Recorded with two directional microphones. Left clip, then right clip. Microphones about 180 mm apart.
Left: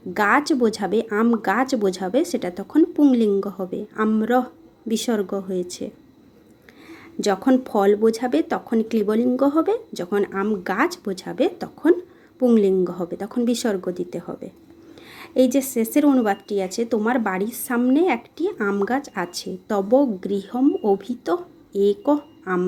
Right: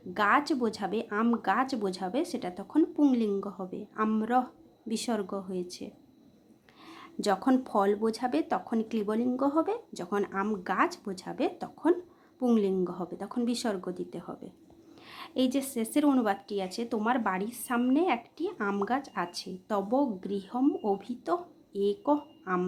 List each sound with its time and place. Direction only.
0.1 s a woman's voice: 15° left (ahead or behind)
6.9 s a woman's voice: 5° left (ahead or behind)